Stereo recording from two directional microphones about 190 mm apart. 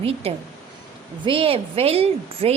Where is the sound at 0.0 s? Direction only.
30° right (ahead or behind).